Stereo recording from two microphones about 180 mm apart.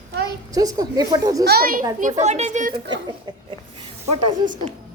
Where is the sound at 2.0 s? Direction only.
40° right (ahead or behind).